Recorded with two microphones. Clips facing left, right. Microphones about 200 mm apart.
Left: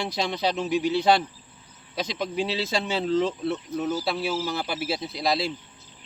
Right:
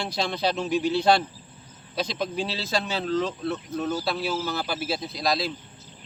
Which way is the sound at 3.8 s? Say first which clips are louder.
Even; 5° left (ahead or behind).